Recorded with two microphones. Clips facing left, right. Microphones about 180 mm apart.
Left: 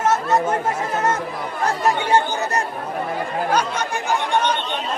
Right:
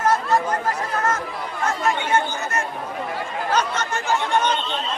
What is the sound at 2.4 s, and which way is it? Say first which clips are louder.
Chatter: left 3 dB; 35° left (ahead or behind).